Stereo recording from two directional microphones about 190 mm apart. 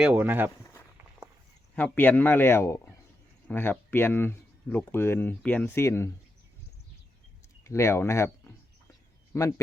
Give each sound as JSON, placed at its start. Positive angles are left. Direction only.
{"t": 0.0, "sound": "speech", "side_deg": -10}
{"t": 1.7, "sound": "speech", "side_deg": 10}
{"t": 7.6, "sound": "speech", "side_deg": 15}